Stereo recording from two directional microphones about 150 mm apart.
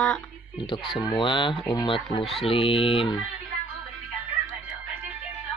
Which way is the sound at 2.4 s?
40° left (ahead or behind).